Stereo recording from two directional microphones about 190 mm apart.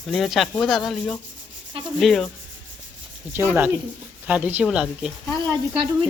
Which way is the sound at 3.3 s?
10° right (ahead or behind).